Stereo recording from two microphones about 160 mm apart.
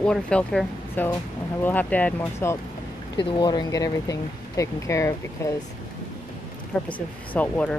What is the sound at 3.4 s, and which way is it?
Speech, 25° left (ahead or behind).